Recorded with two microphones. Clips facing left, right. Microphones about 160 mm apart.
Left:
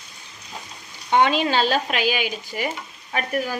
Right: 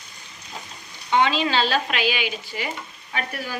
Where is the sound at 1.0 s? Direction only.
50° left (ahead or behind).